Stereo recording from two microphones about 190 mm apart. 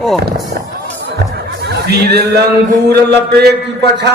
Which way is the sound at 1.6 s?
60° right (ahead or behind).